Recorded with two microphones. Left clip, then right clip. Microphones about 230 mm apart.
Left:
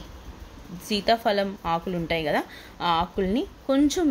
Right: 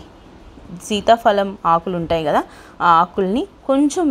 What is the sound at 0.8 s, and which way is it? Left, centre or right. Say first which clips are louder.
A woman's voice: right 9 dB; centre.